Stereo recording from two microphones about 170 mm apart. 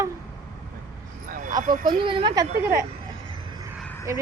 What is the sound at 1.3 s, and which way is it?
Speech, 50° right (ahead or behind).